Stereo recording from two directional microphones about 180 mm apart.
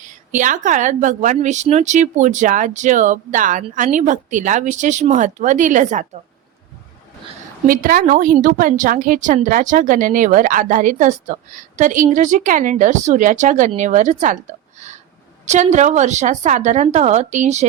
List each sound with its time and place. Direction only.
0.0 s a woman's voice: 45° right (ahead or behind)
7.7 s a woman's voice: 50° right (ahead or behind)